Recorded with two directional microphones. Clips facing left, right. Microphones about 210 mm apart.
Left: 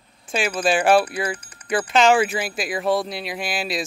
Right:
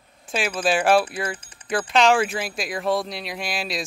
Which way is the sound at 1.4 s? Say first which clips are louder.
Left 2 dB; 25° right (ahead or behind).